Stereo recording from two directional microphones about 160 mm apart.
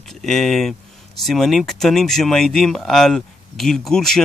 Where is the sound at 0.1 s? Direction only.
Centre (ahead or behind).